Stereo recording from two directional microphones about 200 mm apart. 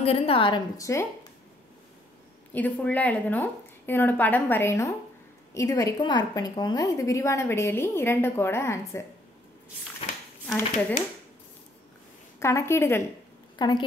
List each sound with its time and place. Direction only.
0.0 s a woman's voice: 30° left (ahead or behind)
2.5 s a woman's voice: 10° left (ahead or behind)
10.4 s speech: 5° left (ahead or behind)
12.4 s a woman's voice: 15° left (ahead or behind)